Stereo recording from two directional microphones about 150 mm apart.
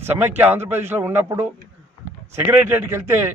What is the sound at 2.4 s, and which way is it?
Speech, 15° right (ahead or behind).